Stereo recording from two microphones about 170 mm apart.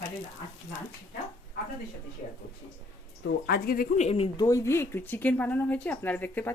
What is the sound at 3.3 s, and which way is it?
Speech, 65° left (ahead or behind).